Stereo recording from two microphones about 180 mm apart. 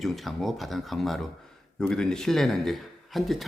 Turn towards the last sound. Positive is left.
turn(degrees=0)  # may be behind; listen again after turning